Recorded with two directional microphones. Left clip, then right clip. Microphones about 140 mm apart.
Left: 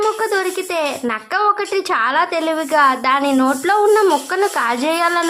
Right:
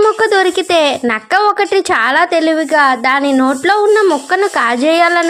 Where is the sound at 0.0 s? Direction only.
30° right (ahead or behind).